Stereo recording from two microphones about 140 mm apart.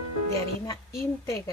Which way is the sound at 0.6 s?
20° left (ahead or behind).